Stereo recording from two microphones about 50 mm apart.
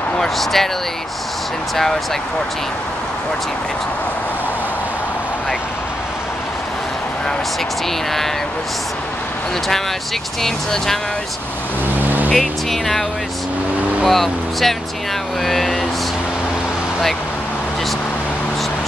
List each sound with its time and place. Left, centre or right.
0.2 s speech: centre
10.4 s speech: centre
12.0 s vehicle: right
12.4 s speech: centre
14.0 s speech: centre